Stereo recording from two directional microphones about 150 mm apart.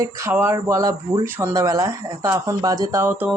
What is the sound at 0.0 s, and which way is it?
Speech, 20° right (ahead or behind).